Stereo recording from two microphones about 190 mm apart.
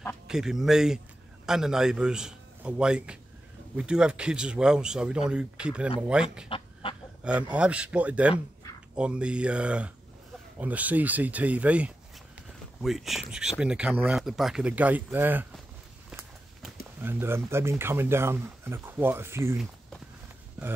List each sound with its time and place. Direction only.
0.3 s a man's voice: centre (ahead or behind)
6.5 s fowl: 25° left (ahead or behind)
7.2 s speech: 5° right (ahead or behind)
17.0 s speech: 10° right (ahead or behind)